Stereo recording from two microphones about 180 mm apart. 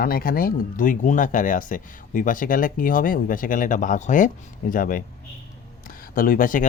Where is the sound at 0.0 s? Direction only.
55° left (ahead or behind).